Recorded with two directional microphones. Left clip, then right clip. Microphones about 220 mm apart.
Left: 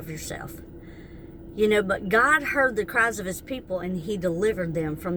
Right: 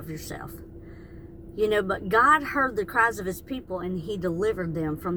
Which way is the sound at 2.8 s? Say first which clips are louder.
Even; 20° left (ahead or behind).